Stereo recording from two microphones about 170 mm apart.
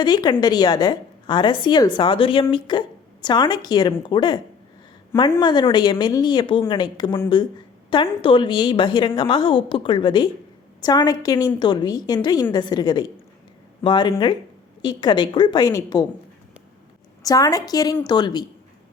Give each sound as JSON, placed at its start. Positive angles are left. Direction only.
{"t": 0.0, "sound": "a woman's voice", "side_deg": 25}
{"t": 8.2, "sound": "a woman's voice", "side_deg": 30}
{"t": 17.2, "sound": "a woman's voice", "side_deg": 20}